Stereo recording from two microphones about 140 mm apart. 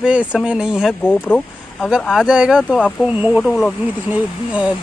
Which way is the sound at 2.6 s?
5° left (ahead or behind).